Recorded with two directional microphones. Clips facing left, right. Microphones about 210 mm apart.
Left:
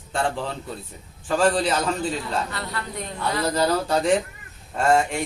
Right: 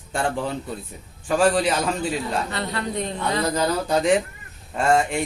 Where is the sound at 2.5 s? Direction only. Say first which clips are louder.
Right 5 dB; 25° right (ahead or behind).